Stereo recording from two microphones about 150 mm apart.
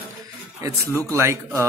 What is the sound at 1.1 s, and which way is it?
Speech, 15° right (ahead or behind).